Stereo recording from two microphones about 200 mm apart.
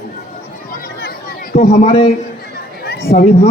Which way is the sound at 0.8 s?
45° left (ahead or behind).